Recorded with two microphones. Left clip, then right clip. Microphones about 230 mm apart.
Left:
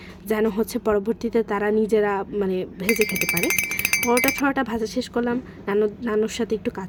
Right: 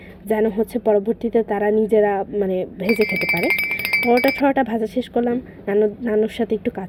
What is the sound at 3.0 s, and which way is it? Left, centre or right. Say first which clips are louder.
Speech: right 5 dB; left.